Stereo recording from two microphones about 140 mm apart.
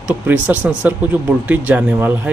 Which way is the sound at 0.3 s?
10° right (ahead or behind).